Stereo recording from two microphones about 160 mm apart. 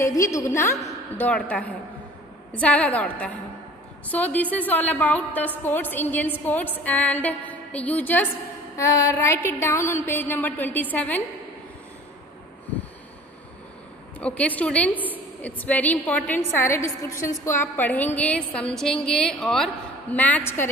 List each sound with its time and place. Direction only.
0.0 s a woman's voice: 20° left (ahead or behind)
14.2 s a woman's voice: 10° left (ahead or behind)